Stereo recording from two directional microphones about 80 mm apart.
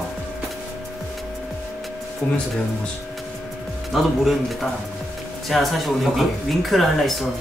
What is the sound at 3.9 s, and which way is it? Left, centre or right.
Speech, centre.